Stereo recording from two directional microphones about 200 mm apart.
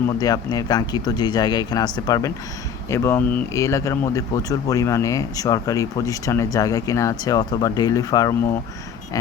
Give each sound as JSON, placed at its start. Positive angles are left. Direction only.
{"t": 0.2, "sound": "speech", "side_deg": 20}